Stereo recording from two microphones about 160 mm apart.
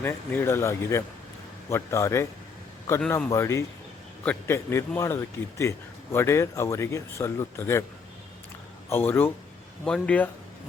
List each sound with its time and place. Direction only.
0.0 s speech: 15° left (ahead or behind)
8.9 s speech: 15° left (ahead or behind)